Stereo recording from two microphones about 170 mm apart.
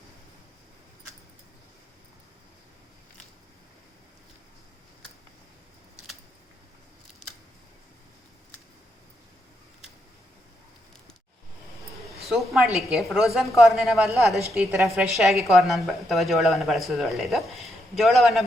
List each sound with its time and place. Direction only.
12.2 s a woman's voice: centre (ahead or behind)